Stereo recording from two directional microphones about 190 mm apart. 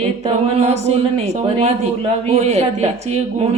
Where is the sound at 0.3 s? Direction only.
35° right (ahead or behind).